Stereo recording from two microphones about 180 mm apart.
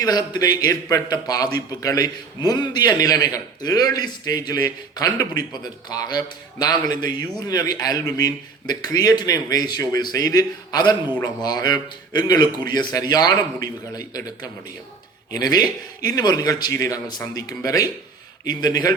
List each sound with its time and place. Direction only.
0.0 s a man's voice: 20° left (ahead or behind)